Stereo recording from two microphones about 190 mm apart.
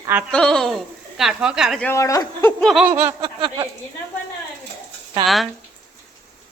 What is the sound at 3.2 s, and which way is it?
Speech, 25° right (ahead or behind).